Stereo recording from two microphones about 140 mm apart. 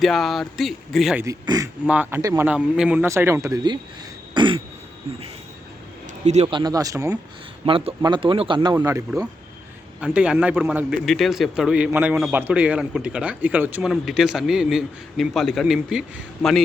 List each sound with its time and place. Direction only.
0.0 s a man's voice: centre (ahead or behind)
1.2 s a man's voice: 25° right (ahead or behind)
1.9 s a man's voice: 15° right (ahead or behind)
2.5 s a man's voice: 5° right (ahead or behind); by 3.8 s 30° right (ahead or behind)
4.4 s throat clearing: 35° right (ahead or behind)
6.2 s speech: 55° right (ahead or behind)
6.5 s speech: 30° right (ahead or behind)
7.6 s speech: 40° right (ahead or behind)
8.7 s speech: 20° right (ahead or behind)
10.0 s a man's voice: 10° right (ahead or behind)
13.8 s a man's voice: centre (ahead or behind)